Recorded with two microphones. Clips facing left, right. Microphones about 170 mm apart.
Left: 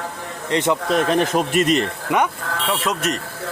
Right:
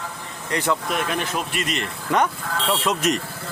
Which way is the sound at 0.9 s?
40° left (ahead or behind).